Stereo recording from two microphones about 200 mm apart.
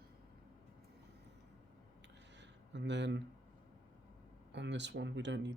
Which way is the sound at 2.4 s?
60° right (ahead or behind).